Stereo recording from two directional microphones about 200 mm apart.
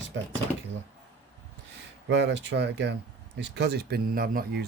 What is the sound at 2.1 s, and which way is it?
Speech, 60° right (ahead or behind).